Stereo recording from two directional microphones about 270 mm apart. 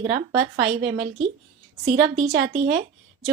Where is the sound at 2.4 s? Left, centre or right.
Right.